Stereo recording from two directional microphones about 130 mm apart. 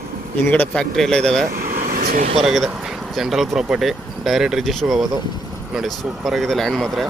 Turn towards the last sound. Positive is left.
turn(degrees=0)  # may be behind; listen again after turning